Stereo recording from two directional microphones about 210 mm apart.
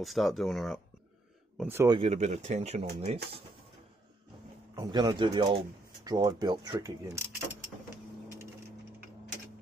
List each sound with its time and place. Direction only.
0.0 s speech: centre (ahead or behind)
1.6 s speech: 10° right (ahead or behind)
2.0 s speech: 30° right (ahead or behind)
4.7 s speech: 20° right (ahead or behind)